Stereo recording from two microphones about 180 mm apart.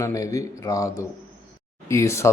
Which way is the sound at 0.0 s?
15° left (ahead or behind).